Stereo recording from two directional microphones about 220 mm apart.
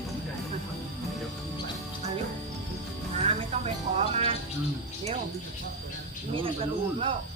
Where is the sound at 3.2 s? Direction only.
30° right (ahead or behind).